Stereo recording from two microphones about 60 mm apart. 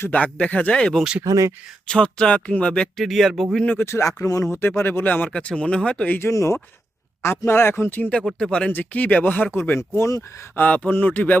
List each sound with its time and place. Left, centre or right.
0.1 s speech: left
1.2 s speech: right
1.9 s speech: centre
3.0 s speech: centre
3.8 s speech: left
4.5 s speech: left
5.3 s speech: centre
6.1 s speech: left
8.4 s speech: centre
8.7 s speech: left
9.6 s speech: left
10.5 s speech: left